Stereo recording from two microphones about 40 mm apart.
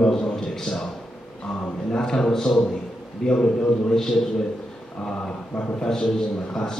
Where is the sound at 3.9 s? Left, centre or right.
Centre.